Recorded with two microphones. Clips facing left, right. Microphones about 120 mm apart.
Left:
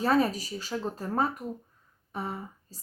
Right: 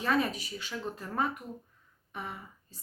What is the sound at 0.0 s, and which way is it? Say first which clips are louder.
A woman's voice: left 5 dB; 35° left (ahead or behind).